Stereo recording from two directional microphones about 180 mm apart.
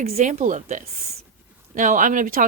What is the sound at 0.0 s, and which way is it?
Speech, 35° right (ahead or behind).